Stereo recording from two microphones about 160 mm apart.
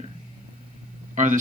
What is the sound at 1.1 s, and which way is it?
Speech, 50° right (ahead or behind).